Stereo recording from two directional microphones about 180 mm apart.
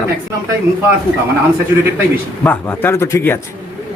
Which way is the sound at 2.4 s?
10° left (ahead or behind).